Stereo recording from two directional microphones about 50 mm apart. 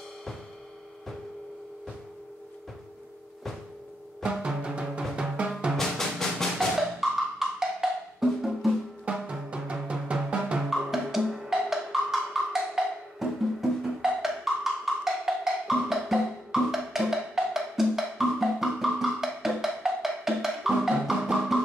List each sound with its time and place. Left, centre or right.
4.2 s music: centre
5.8 s music: centre
7.0 s wood block: centre
9.0 s music: right
10.7 s music: centre